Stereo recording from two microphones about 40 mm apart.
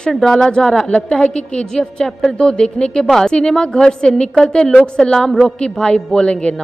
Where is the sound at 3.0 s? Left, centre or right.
Centre.